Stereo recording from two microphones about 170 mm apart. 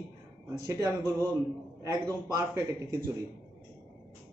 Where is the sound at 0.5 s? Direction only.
20° right (ahead or behind).